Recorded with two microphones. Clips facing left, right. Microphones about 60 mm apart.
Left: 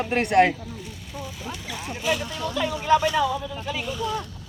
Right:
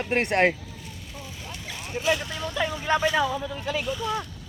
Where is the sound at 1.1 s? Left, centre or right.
Centre.